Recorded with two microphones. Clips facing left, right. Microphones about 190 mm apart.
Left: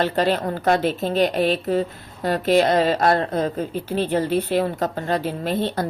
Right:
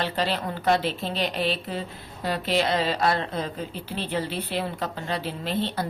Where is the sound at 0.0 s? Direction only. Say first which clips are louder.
Left 7 dB; 45° left (ahead or behind).